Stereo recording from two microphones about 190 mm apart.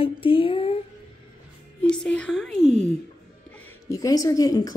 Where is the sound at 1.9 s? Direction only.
5° left (ahead or behind).